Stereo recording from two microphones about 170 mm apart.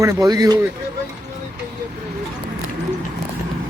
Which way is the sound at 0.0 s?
20° right (ahead or behind).